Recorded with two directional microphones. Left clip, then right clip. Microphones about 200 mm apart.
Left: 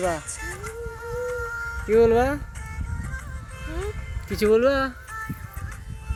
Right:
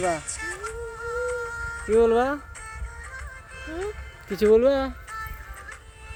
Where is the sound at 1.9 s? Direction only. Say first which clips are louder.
Left 2 dB; 25° left (ahead or behind).